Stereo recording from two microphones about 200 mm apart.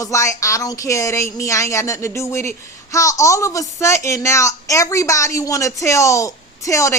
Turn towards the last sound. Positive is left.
turn(degrees=15)  # may be behind; listen again after turning